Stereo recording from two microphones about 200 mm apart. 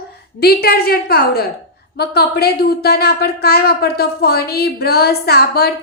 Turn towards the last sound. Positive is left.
turn(degrees=55)  # may be behind; listen again after turning